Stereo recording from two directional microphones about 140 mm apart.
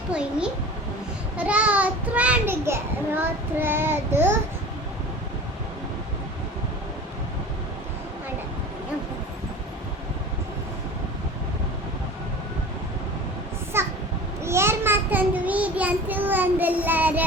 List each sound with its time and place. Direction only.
0.1 s a child's voice: 5° right (ahead or behind)
13.7 s a sound: 15° right (ahead or behind)
14.4 s child singing: 20° right (ahead or behind)